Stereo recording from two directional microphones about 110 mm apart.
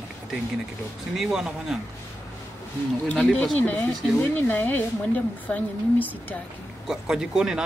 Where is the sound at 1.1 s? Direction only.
5° right (ahead or behind).